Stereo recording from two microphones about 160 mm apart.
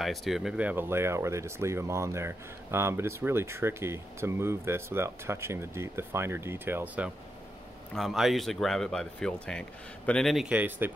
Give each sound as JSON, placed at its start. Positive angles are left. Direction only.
{"t": 0.0, "sound": "speech", "side_deg": 0}
{"t": 7.9, "sound": "speech", "side_deg": 0}